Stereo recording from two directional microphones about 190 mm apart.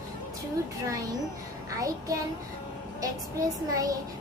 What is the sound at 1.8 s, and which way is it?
Speech, 15° right (ahead or behind).